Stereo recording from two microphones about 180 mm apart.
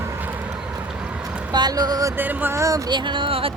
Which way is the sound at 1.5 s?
20° right (ahead or behind).